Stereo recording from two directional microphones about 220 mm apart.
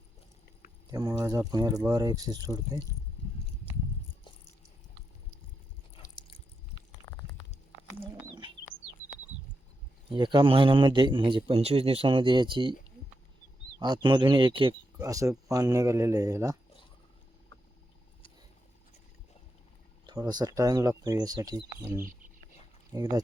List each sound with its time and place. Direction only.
0.9 s speech: 15° right (ahead or behind)
6.0 s a sound: 25° left (ahead or behind)
7.0 s a sound: 15° right (ahead or behind)
10.2 s a man's voice: 20° right (ahead or behind)
13.7 s a man's voice: 20° right (ahead or behind)
20.1 s speech: 20° right (ahead or behind)